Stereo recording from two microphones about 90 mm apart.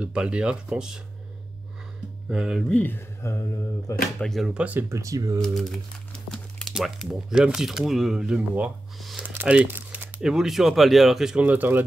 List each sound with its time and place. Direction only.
0.0 s speech: 10° right (ahead or behind)
2.3 s speech: 5° right (ahead or behind)
2.7 s speech: 20° left (ahead or behind)
3.2 s mantra: 30° left (ahead or behind)
4.2 s speech: 5° left (ahead or behind)
4.6 s speech: 15° right (ahead or behind)
4.8 s speech: 35° right (ahead or behind)
5.4 s crumpling: 5° left (ahead or behind)
6.7 s speech: 5° right (ahead or behind)
9.2 s crumpling: 15° right (ahead or behind)
10.2 s speech: 5° right (ahead or behind)
11.4 s speech: 20° right (ahead or behind)